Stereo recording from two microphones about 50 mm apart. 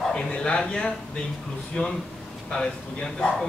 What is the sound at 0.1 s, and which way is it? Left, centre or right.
Speech, centre.